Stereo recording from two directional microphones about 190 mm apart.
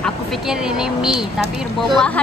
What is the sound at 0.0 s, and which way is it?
Speech, centre (ahead or behind).